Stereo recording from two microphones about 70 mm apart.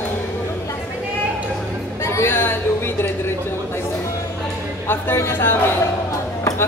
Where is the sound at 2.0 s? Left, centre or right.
Left.